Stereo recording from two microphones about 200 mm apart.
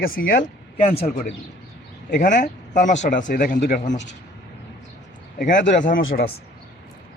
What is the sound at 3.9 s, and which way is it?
Speech, 60° left (ahead or behind).